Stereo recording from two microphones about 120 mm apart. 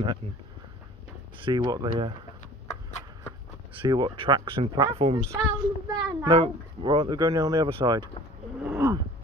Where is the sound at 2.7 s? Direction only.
75° left (ahead or behind).